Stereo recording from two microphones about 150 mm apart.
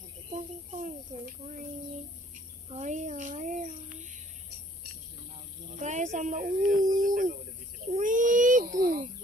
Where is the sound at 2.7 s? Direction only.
50° right (ahead or behind).